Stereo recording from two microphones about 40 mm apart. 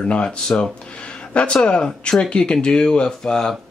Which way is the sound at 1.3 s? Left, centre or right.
Left.